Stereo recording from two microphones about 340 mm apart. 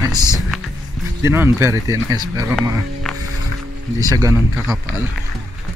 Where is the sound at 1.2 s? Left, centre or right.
Centre.